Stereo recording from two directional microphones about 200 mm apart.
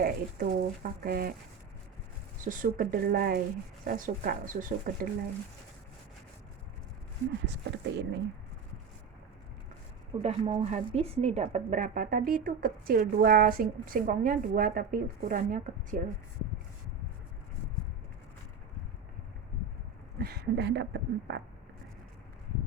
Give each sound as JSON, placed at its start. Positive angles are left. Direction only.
{"t": 0.0, "sound": "speech", "side_deg": -45}
{"t": 2.4, "sound": "speech", "side_deg": -40}
{"t": 7.4, "sound": "speech", "side_deg": -60}
{"t": 10.2, "sound": "speech", "side_deg": -35}
{"t": 20.2, "sound": "speech", "side_deg": -55}